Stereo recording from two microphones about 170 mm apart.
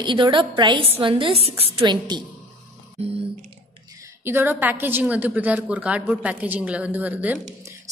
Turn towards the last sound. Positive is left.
turn(degrees=-10)  # may be behind; listen again after turning